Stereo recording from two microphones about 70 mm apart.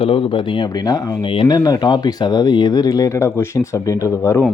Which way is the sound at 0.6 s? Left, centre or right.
Left.